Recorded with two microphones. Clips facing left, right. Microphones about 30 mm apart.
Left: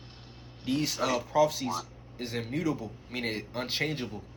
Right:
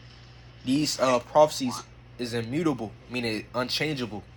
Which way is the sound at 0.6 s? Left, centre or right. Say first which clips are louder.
Right 5 dB; right.